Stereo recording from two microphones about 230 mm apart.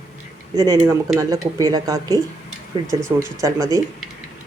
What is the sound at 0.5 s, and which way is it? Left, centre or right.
Speech, centre.